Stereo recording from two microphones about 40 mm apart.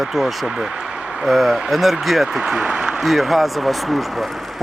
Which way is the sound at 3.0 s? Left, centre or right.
Centre.